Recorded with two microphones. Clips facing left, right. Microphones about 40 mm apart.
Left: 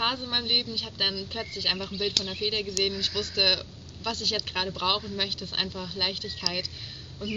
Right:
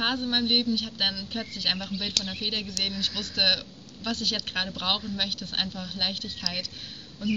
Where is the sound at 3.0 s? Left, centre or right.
Right.